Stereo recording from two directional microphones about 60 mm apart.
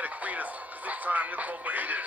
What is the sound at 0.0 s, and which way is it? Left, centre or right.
Speech, right.